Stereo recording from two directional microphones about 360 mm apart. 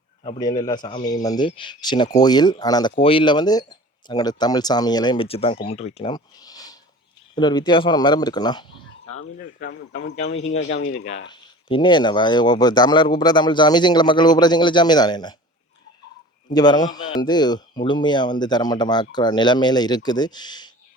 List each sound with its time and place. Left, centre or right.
0.3 s speech: centre
9.6 s speech: left
16.5 s speech: centre